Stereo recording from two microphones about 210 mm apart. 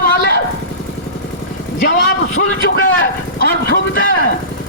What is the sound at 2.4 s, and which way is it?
Speech, 60° left (ahead or behind).